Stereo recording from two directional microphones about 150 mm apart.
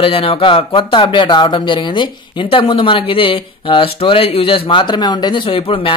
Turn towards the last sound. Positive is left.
turn(degrees=35)  # may be behind; listen again after turning